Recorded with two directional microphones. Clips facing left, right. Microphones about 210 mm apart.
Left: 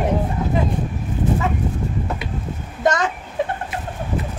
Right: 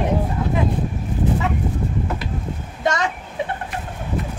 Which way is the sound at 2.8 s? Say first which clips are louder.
Left 2 dB; 50° left (ahead or behind).